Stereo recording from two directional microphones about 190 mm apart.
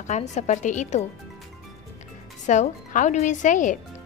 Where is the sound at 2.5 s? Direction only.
40° left (ahead or behind).